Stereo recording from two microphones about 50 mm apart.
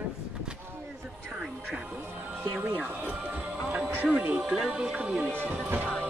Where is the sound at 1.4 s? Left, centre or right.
Centre.